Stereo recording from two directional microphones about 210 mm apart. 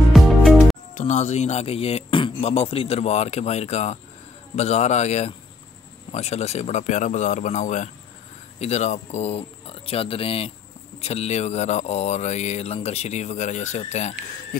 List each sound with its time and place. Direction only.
0.1 s music: centre (ahead or behind)
0.9 s speech: 35° left (ahead or behind)